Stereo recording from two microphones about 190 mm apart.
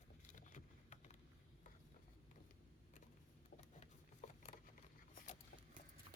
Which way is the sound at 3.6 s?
40° left (ahead or behind).